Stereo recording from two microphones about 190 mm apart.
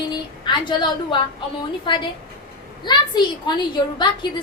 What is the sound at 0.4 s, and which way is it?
A woman's voice, 25° left (ahead or behind).